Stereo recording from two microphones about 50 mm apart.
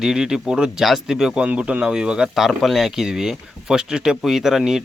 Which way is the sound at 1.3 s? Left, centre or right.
Right.